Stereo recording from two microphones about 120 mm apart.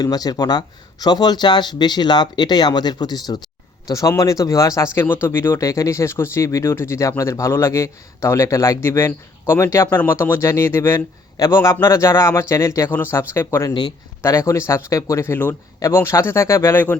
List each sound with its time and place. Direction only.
0.0 s speech: 35° left (ahead or behind); by 17.0 s 15° left (ahead or behind)